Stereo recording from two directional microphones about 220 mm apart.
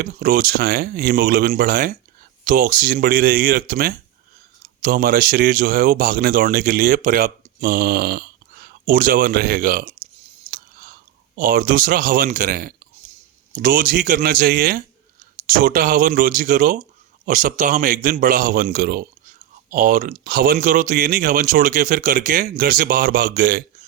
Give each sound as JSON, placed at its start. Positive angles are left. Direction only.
{"t": 0.0, "sound": "speech", "side_deg": -40}
{"t": 10.5, "sound": "chewing", "side_deg": -40}
{"t": 11.3, "sound": "speech", "side_deg": -40}